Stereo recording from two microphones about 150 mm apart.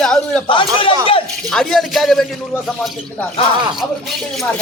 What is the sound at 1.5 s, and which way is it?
Speech, 5° left (ahead or behind).